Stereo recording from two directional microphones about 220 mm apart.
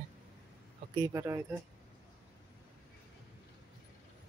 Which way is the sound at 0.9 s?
15° right (ahead or behind).